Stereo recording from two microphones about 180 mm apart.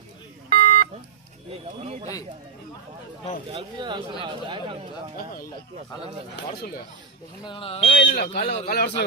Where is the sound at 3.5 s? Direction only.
25° right (ahead or behind).